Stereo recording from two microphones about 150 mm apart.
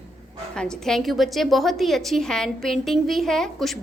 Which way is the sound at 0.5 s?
5° left (ahead or behind).